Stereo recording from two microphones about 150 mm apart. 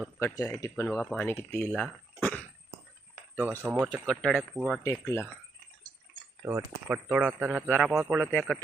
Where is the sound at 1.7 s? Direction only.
5° left (ahead or behind).